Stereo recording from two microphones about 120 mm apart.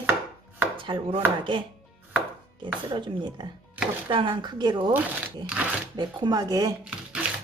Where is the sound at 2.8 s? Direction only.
40° right (ahead or behind).